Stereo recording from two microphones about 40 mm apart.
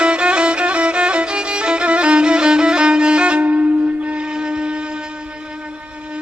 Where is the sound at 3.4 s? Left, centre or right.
Right.